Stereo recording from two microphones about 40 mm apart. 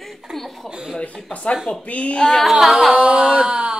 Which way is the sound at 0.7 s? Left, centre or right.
Centre.